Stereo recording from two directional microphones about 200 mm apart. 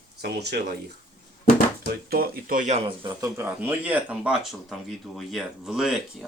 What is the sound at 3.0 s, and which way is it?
Speech, 15° right (ahead or behind).